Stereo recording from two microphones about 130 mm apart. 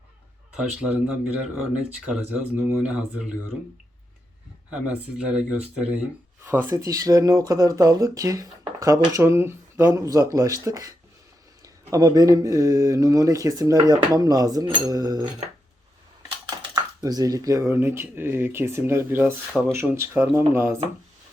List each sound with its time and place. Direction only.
0.5 s speech: 10° right (ahead or behind)
2.1 s speech: 10° right (ahead or behind)
4.7 s speech: 10° right (ahead or behind); by 15.3 s 30° right (ahead or behind)
16.5 s speech: 30° right (ahead or behind)